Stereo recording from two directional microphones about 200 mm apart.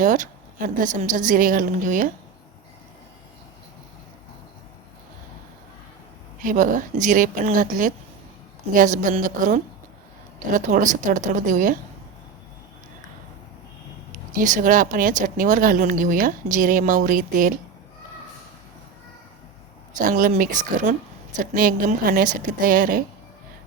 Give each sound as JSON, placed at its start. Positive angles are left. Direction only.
{"t": 0.0, "sound": "speech", "side_deg": -40}
{"t": 6.4, "sound": "speech", "side_deg": -40}
{"t": 14.3, "sound": "speech", "side_deg": -40}
{"t": 20.0, "sound": "speech", "side_deg": -45}